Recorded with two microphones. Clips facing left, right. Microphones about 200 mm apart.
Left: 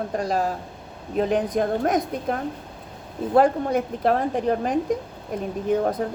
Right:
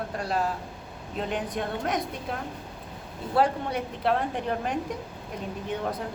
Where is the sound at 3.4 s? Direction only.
45° left (ahead or behind).